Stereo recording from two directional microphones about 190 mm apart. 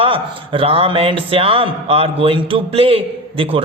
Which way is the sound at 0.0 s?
30° right (ahead or behind).